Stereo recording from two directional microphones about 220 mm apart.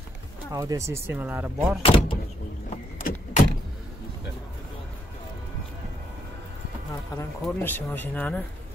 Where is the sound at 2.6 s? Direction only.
35° left (ahead or behind).